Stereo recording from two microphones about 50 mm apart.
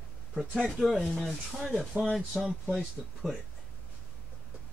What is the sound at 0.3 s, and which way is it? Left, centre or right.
Speech, centre.